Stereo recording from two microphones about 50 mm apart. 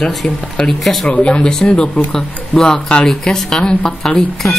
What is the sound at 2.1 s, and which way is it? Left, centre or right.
Speech, centre.